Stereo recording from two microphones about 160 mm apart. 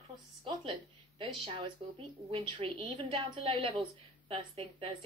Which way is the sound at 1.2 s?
30° right (ahead or behind).